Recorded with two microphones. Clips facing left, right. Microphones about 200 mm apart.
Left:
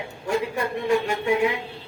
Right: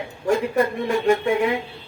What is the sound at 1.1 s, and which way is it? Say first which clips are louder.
Speech: right 4 dB; 50° right (ahead or behind).